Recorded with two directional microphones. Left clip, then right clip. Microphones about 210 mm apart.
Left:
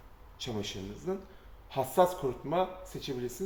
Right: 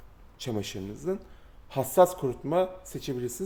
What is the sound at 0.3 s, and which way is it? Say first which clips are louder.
Speech: right 3 dB; 55° right (ahead or behind).